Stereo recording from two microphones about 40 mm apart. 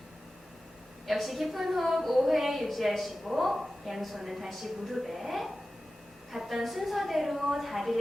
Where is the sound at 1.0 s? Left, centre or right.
Centre.